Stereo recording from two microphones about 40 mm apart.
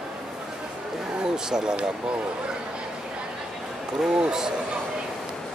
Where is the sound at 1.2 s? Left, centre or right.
Centre.